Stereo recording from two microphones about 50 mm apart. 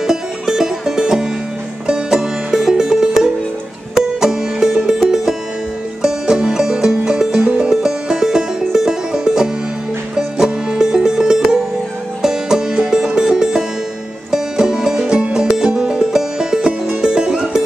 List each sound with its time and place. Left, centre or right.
0.0 s music: centre
4.2 s music: centre
7.7 s music: centre